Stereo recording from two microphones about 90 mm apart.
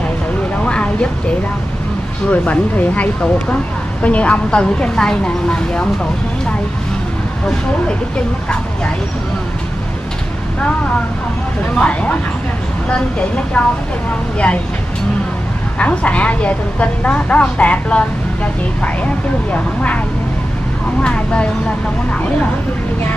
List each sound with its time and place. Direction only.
2.3 s a woman's voice: 15° left (ahead or behind)
11.7 s a woman's voice: 15° left (ahead or behind)
13.5 s a woman's voice: 10° left (ahead or behind)
15.8 s a woman's voice: 15° left (ahead or behind)
21.0 s a woman's voice: 10° left (ahead or behind)